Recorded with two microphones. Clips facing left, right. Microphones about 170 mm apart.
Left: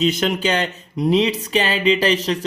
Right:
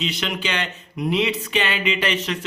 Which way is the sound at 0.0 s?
45° left (ahead or behind).